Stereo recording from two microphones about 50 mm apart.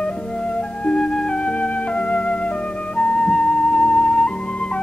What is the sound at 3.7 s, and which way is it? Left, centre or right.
Music, left.